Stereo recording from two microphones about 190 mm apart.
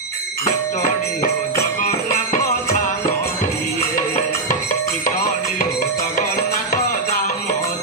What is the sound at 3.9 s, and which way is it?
Music, 45° left (ahead or behind).